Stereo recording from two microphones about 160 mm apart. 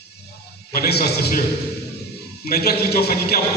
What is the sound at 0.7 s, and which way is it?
Speech, 75° left (ahead or behind).